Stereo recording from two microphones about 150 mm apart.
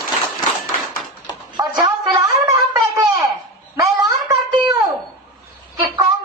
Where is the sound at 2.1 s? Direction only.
20° right (ahead or behind).